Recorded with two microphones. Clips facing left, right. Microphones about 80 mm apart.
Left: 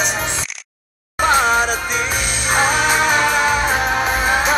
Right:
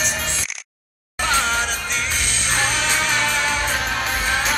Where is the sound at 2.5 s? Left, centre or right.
Centre.